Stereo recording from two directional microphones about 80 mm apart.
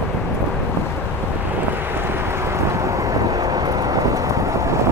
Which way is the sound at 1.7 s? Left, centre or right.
Right.